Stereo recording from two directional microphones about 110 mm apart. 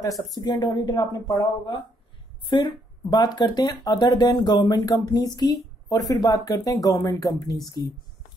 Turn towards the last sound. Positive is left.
turn(degrees=35)  # may be behind; listen again after turning